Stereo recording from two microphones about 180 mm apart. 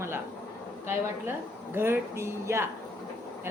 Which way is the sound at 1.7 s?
15° right (ahead or behind).